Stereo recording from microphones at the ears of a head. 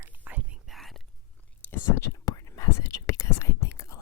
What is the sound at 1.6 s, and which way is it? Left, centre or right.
Whispering, left.